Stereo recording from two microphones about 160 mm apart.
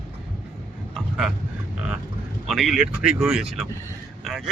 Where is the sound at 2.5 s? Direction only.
Centre (ahead or behind).